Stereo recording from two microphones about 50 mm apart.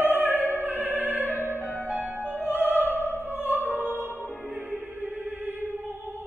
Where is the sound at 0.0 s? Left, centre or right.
Right.